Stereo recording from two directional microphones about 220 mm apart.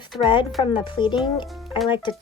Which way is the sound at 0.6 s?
20° left (ahead or behind).